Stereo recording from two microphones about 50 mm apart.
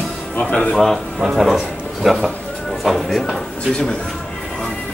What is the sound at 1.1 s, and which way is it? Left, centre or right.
Speech, centre.